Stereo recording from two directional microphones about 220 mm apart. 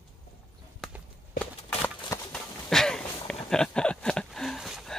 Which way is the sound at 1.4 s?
5° left (ahead or behind).